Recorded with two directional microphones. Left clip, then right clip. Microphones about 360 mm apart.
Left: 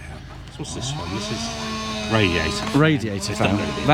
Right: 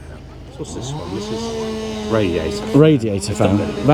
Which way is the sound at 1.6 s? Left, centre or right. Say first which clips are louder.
Right 3 dB; left.